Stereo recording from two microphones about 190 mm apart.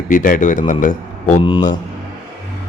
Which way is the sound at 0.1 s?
45° left (ahead or behind).